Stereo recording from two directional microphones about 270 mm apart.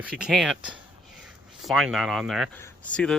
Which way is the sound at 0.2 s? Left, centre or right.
Centre.